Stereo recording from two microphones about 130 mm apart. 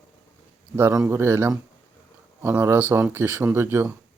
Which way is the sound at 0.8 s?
20° right (ahead or behind).